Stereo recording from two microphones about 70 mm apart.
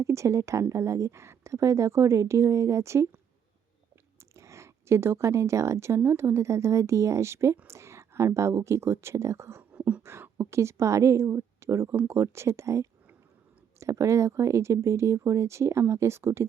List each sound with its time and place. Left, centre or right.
0.0 s a woman's voice: right
4.2 s a sound: right
6.0 s a woman's voice: right
9.7 s beatboxing: right
10.0 s a woman's voice: right